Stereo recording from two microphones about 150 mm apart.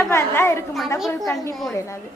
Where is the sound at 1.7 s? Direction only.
20° left (ahead or behind).